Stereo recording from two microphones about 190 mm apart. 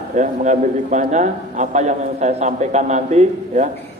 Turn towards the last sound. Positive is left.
turn(degrees=-40)  # may be behind; listen again after turning